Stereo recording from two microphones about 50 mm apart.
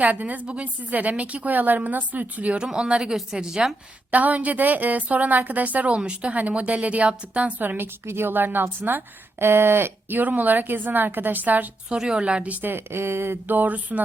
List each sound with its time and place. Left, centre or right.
0.0 s speech: right
2.7 s a woman's voice: right
4.1 s speech: right
6.0 s a woman's voice: centre
6.3 s a woman's voice: right
7.6 s speech: right
8.0 s speech: right
9.4 s speech: right
11.9 s a woman's voice: centre
12.6 s speech: right
13.6 s speech: right